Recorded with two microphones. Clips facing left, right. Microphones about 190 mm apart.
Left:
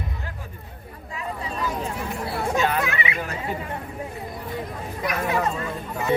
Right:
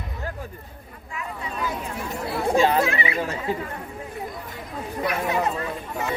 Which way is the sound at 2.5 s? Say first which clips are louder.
Right 5 dB; 30° right (ahead or behind).